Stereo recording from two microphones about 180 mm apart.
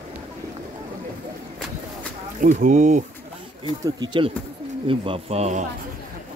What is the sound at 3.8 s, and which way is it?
Speech, 25° right (ahead or behind).